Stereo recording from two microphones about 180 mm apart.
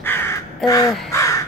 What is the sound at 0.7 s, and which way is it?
Speech, 20° left (ahead or behind).